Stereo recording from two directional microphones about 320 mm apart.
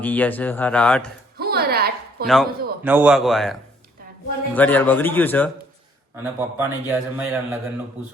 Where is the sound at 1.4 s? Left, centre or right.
Right.